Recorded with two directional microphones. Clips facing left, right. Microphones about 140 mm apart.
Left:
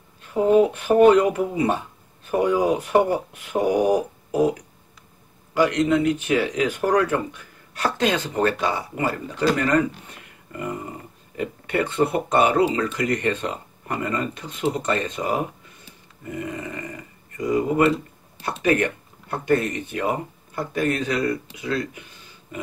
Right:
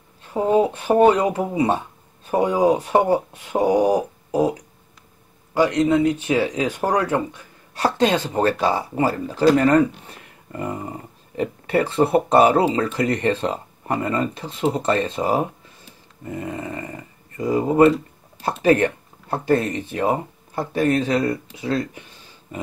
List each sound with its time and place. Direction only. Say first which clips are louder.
0.2 s speech: left 1 dB; 25° right (ahead or behind)
5.5 s speech: right 2 dB; 25° right (ahead or behind)
11.3 s speech: right 4 dB; 30° right (ahead or behind)